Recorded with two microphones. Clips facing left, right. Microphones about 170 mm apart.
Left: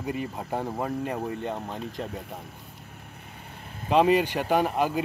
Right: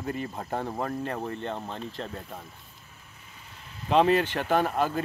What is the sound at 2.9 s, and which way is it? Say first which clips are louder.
Vehicle: left 7 dB; 55° left (ahead or behind).